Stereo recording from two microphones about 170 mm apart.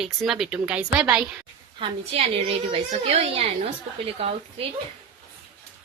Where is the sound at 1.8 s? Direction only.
35° right (ahead or behind).